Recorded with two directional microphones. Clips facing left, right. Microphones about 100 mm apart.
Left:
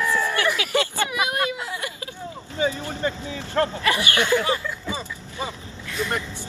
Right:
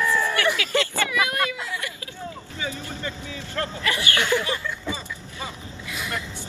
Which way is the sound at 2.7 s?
20° left (ahead or behind).